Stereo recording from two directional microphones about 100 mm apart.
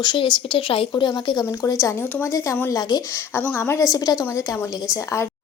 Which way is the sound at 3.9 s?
40° left (ahead or behind).